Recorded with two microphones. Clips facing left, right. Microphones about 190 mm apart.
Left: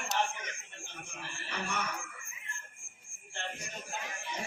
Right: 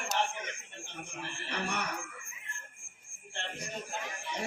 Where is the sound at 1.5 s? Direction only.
65° right (ahead or behind).